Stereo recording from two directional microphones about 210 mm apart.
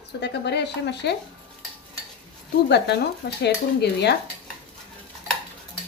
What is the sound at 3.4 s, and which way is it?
Speech, 50° left (ahead or behind).